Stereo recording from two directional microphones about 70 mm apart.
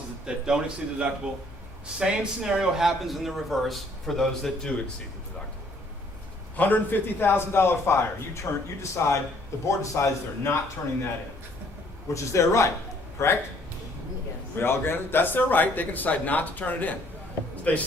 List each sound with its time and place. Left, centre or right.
0.3 s a man's voice: centre
6.6 s a man's voice: left
12.0 s a man's voice: left
14.5 s speech: left